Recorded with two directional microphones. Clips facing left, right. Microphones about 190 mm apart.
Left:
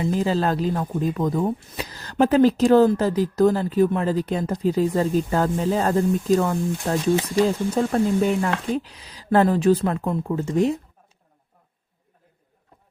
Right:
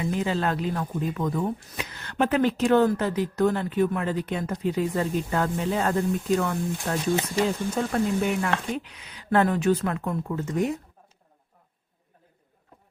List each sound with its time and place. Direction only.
0.0 s speech: 35° left (ahead or behind)
7.9 s speech: 30° left (ahead or behind)